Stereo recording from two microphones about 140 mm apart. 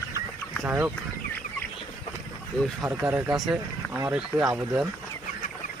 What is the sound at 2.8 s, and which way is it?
Speech, 15° right (ahead or behind).